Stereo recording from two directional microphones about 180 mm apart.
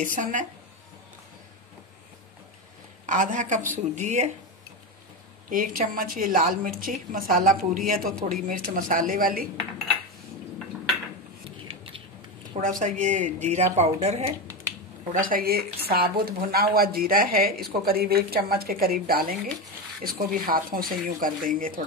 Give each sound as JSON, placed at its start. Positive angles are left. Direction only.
{"t": 0.0, "sound": "a woman's voice", "side_deg": -45}
{"t": 3.1, "sound": "a woman's voice", "side_deg": -45}
{"t": 5.5, "sound": "a woman's voice", "side_deg": -50}
{"t": 11.4, "sound": "a sound", "side_deg": -30}
{"t": 12.5, "sound": "a woman's voice", "side_deg": -45}
{"t": 15.1, "sound": "a woman's voice", "side_deg": -50}